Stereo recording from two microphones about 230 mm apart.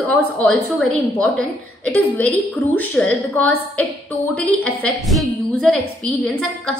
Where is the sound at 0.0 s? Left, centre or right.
Centre.